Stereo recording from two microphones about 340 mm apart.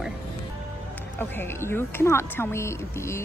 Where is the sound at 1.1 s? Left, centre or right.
Centre.